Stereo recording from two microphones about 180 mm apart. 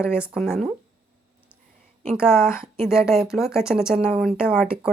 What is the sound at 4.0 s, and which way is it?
Speech, 35° right (ahead or behind).